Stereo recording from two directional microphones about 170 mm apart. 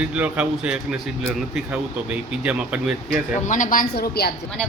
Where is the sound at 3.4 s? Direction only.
50° left (ahead or behind); by 4.3 s 65° left (ahead or behind).